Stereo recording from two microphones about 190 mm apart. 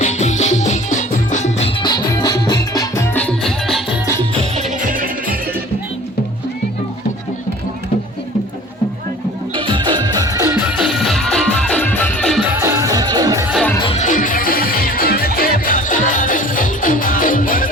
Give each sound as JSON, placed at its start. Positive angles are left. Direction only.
{"t": 0.0, "sound": "music", "side_deg": 40}
{"t": 4.2, "sound": "music", "side_deg": -35}
{"t": 9.6, "sound": "music", "side_deg": -25}
{"t": 12.5, "sound": "music", "side_deg": -15}
{"t": 13.5, "sound": "music", "side_deg": 0}
{"t": 13.7, "sound": "music", "side_deg": 25}
{"t": 14.0, "sound": "music", "side_deg": 45}